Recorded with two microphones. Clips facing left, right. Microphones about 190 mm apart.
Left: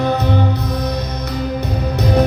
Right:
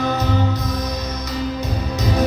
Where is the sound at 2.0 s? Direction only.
60° left (ahead or behind).